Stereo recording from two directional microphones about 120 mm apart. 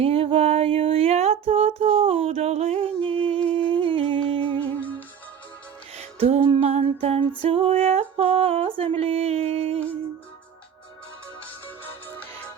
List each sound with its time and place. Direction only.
0.0 s a sound: 55° right (ahead or behind)
3.5 s humming: 45° right (ahead or behind)
4.8 s music: 10° left (ahead or behind)
6.0 s female singing: 55° right (ahead or behind)